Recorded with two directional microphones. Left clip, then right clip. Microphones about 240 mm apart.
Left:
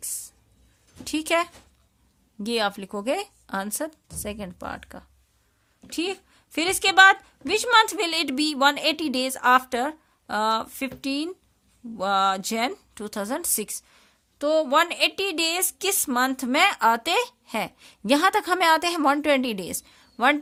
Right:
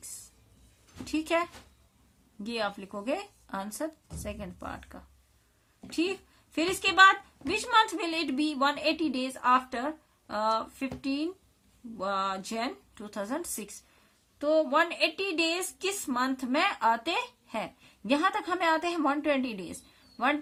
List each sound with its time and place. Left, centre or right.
1.0 s a woman's voice: left